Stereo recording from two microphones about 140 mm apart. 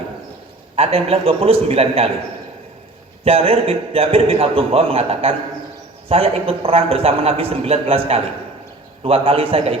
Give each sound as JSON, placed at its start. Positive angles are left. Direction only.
{"t": 0.8, "sound": "a man's voice", "side_deg": -45}
{"t": 3.2, "sound": "a man's voice", "side_deg": -45}